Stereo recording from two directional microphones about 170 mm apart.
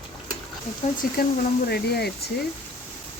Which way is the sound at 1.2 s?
65° left (ahead or behind).